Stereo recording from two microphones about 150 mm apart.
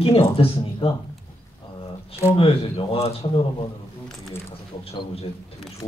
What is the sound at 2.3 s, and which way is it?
Speech, 35° left (ahead or behind).